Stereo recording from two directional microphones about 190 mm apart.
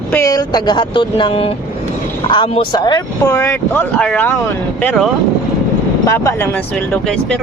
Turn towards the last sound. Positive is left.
turn(degrees=15)  # may be behind; listen again after turning